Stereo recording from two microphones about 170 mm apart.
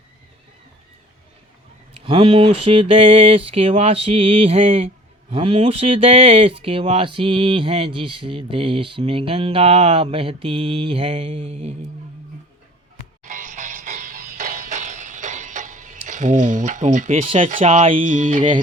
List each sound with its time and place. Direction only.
1.9 s speech: 30° right (ahead or behind)
13.2 s music: 50° right (ahead or behind)
17.6 s speech: 35° right (ahead or behind)
17.9 s music: 50° right (ahead or behind)